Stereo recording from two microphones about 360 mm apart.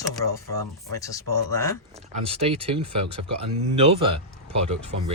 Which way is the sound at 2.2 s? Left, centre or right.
Centre.